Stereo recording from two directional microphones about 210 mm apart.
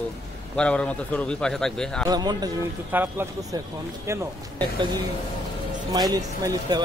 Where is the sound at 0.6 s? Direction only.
5° left (ahead or behind).